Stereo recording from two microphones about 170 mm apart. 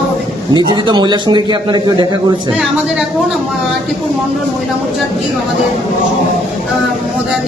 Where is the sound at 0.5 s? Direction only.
25° right (ahead or behind).